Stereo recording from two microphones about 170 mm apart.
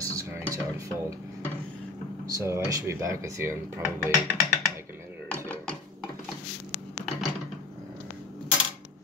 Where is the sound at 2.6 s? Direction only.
20° right (ahead or behind).